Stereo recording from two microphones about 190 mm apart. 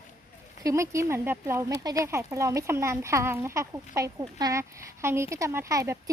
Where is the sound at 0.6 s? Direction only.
15° right (ahead or behind).